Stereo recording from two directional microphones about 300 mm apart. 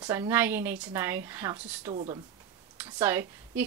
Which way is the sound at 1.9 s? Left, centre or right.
Centre.